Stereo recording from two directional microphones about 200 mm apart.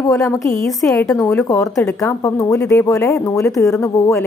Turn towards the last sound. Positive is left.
turn(degrees=15)  # may be behind; listen again after turning